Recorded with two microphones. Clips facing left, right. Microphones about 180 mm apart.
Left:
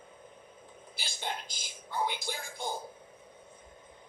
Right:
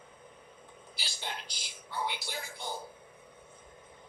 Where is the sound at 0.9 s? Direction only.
50° left (ahead or behind).